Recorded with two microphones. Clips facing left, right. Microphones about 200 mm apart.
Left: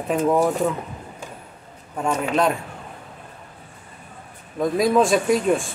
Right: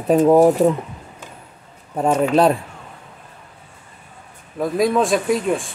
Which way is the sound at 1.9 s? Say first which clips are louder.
Right 6 dB; 35° right (ahead or behind).